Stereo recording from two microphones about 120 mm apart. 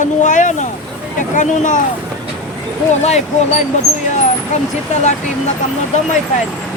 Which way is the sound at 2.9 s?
70° left (ahead or behind).